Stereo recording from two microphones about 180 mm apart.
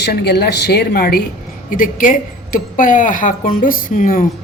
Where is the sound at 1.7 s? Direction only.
50° left (ahead or behind).